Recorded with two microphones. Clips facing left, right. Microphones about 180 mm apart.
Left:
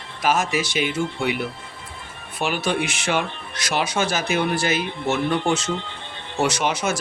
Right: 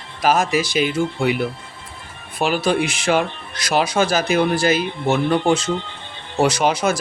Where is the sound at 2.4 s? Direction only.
90° right.